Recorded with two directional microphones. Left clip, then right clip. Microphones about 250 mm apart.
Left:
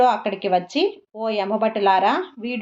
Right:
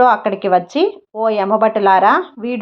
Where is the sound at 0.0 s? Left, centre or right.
Centre.